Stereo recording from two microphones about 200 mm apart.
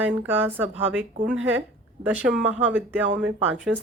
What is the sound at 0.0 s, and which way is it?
A woman's voice, 10° right (ahead or behind).